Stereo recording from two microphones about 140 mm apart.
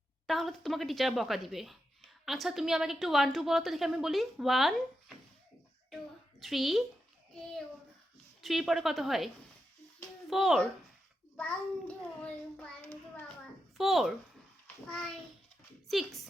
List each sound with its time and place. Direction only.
0.3 s a woman's voice: centre (ahead or behind)
6.4 s a woman's voice: centre (ahead or behind)
8.4 s a woman's voice: centre (ahead or behind)
11.3 s a child's voice: 10° left (ahead or behind)
13.7 s a woman's voice: centre (ahead or behind)
15.9 s a woman's voice: centre (ahead or behind)